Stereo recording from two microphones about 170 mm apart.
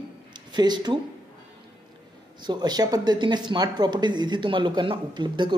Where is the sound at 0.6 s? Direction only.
25° right (ahead or behind).